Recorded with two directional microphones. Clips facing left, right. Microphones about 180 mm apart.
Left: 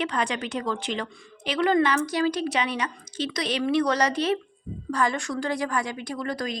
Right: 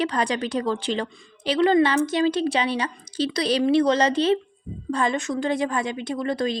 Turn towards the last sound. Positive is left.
turn(degrees=-25)  # may be behind; listen again after turning